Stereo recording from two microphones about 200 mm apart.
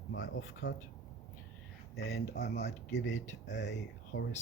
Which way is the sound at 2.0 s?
50° left (ahead or behind).